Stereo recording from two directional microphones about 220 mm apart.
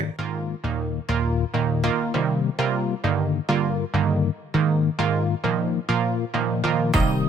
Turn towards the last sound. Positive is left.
turn(degrees=0)  # may be behind; listen again after turning